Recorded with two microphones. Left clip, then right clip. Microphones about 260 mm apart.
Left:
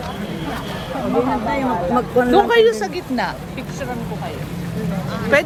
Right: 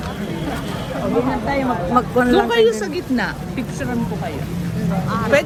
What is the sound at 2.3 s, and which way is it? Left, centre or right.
Speech, left.